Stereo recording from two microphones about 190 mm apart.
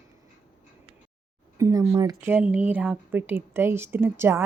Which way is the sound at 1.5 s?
15° right (ahead or behind).